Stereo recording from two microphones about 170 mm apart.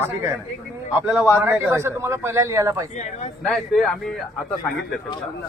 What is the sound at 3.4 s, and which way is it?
Speech, centre (ahead or behind).